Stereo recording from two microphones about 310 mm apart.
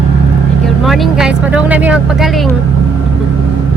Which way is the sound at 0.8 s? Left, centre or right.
Centre.